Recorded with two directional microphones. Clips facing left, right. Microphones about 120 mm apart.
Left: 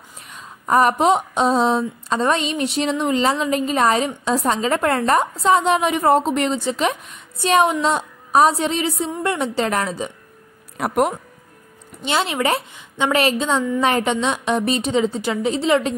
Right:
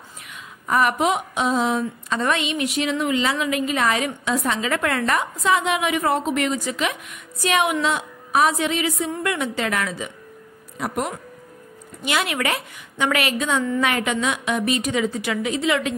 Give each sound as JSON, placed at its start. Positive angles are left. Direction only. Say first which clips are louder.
{"t": 0.7, "sound": "a woman's voice", "louder": "left 4 dB", "side_deg": 35}
{"t": 10.8, "sound": "speech", "louder": "left 7 dB", "side_deg": 55}
{"t": 12.0, "sound": "a woman's voice", "louder": "left 3 dB", "side_deg": 30}